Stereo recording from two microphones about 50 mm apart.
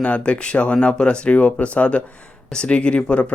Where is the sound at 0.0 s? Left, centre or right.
Left.